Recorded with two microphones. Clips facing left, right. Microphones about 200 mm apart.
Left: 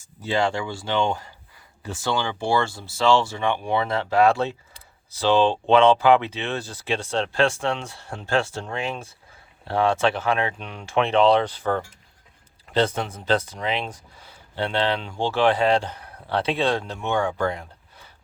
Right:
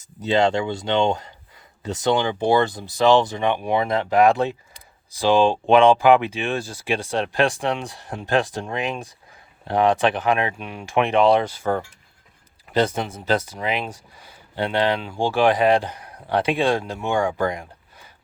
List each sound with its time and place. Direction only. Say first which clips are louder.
0.2 s speech: right 4 dB; 20° right (ahead or behind)